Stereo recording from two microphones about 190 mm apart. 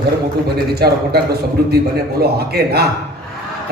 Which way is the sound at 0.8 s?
55° right (ahead or behind).